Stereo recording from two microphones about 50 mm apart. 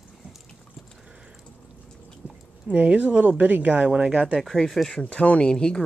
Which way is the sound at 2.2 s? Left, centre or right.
Right.